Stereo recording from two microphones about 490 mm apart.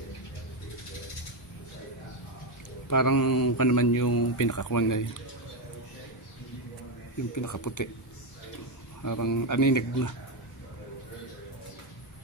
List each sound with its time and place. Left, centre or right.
2.9 s speech: left
7.3 s speech: left
9.0 s speech: left